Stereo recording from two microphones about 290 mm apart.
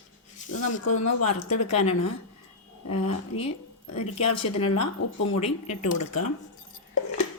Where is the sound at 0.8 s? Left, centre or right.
Left.